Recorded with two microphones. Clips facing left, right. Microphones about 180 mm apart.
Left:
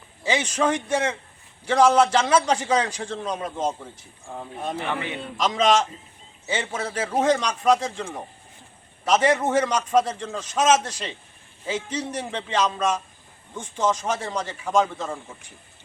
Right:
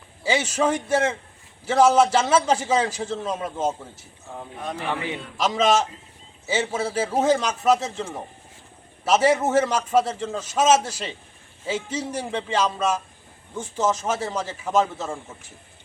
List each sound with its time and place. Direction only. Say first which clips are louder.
0.2 s a man's voice: right 1 dB; 5° right (ahead or behind)